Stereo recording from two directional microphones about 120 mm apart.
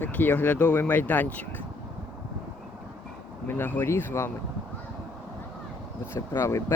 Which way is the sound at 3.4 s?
15° left (ahead or behind).